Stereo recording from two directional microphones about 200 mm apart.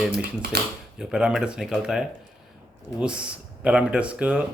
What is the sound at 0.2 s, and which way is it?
Speech, 55° right (ahead or behind).